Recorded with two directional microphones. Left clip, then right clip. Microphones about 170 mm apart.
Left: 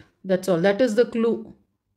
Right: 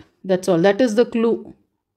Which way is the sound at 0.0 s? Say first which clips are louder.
Right 3 dB; 30° right (ahead or behind).